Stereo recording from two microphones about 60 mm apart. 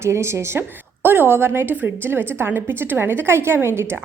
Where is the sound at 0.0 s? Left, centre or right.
Right.